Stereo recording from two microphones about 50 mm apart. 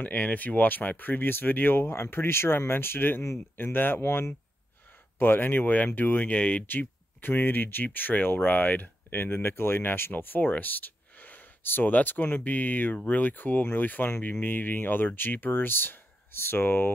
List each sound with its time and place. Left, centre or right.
0.0 s speech: left
5.2 s speech: left